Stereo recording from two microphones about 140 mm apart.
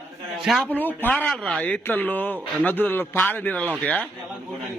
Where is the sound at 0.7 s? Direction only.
15° left (ahead or behind).